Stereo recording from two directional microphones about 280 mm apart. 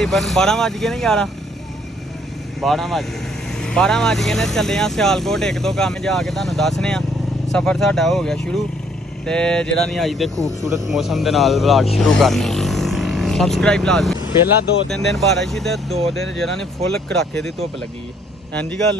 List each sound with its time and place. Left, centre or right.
0.0 s speech: centre
2.6 s speech: centre
10.3 s speech: centre
10.9 s speech: centre
18.5 s speech: centre